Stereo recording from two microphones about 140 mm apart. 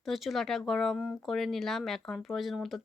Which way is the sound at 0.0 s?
Centre (ahead or behind).